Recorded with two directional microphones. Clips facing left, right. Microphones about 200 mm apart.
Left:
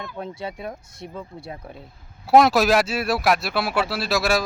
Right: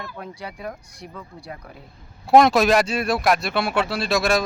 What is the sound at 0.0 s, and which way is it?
Speech, 25° left (ahead or behind).